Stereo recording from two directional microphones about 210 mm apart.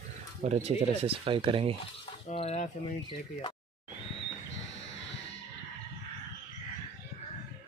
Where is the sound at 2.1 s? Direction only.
30° left (ahead or behind).